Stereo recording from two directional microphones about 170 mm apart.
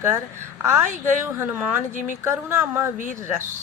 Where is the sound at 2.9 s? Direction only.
50° right (ahead or behind).